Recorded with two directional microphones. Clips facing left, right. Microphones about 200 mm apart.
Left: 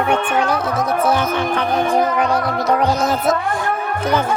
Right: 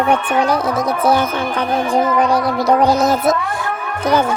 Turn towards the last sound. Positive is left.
turn(degrees=-35)  # may be behind; listen again after turning